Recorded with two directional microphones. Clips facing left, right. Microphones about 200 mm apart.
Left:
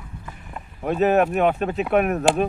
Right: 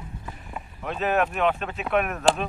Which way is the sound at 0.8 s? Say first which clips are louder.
Left 6 dB; 40° left (ahead or behind).